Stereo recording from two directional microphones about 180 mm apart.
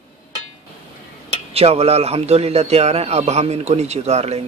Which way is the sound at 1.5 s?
35° right (ahead or behind).